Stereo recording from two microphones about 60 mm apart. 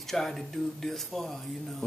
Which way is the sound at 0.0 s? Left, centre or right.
Centre.